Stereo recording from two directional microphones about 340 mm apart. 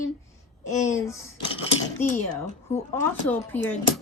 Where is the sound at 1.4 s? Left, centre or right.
Centre.